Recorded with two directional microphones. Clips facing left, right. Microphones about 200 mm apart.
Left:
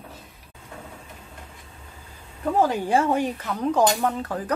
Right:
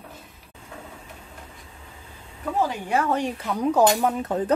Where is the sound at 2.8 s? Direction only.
30° left (ahead or behind).